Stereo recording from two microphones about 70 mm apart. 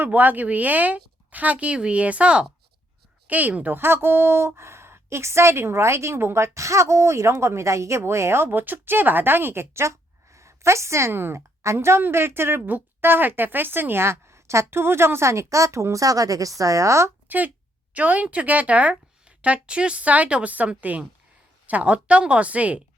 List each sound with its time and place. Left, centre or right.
0.0 s a woman's voice: right
17.2 s a woman's voice: right